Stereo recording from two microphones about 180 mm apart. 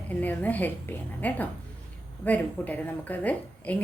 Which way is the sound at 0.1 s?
10° left (ahead or behind).